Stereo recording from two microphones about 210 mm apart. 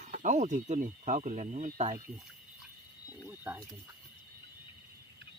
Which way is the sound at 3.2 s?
10° right (ahead or behind).